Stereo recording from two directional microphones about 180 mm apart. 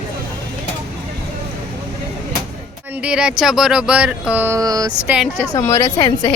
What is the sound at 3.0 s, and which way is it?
Speech, 5° right (ahead or behind).